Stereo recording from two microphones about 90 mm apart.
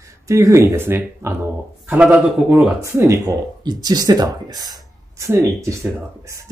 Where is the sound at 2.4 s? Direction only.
5° right (ahead or behind).